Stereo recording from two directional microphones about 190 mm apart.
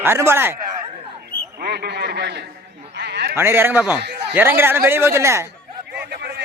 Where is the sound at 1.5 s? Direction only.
60° right (ahead or behind).